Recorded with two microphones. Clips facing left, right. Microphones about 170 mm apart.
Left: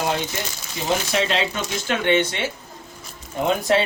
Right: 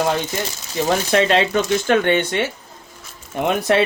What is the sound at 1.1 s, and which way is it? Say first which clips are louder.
Speech: right 7 dB; 50° right (ahead or behind).